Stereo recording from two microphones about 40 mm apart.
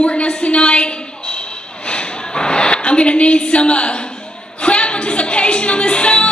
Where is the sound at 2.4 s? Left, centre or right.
Left.